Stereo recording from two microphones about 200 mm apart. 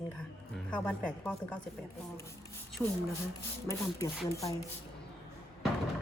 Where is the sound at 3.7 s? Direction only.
15° left (ahead or behind).